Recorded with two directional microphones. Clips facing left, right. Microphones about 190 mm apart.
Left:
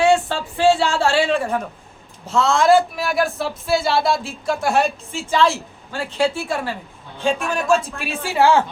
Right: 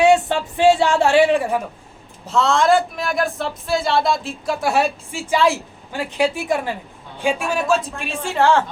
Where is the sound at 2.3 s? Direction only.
Centre (ahead or behind).